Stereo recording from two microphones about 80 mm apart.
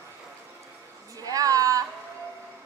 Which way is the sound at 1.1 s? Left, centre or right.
Right.